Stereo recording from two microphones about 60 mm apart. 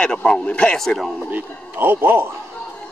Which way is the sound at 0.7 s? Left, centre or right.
Centre.